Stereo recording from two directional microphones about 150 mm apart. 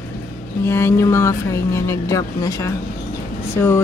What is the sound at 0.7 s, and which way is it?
Speech, 15° left (ahead or behind).